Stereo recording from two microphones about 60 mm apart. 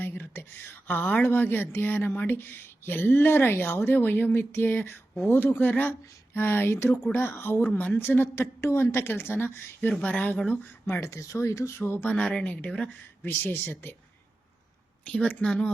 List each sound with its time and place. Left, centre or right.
0.0 s a woman's voice: left
2.2 s speech: left
5.9 s a sound: left
7.1 s speech: left
7.7 s speech: left
7.9 s speech: left
11.0 s speech: left
11.8 s speech: left
12.2 s speech: centre
13.2 s speech: left
15.0 s speech: left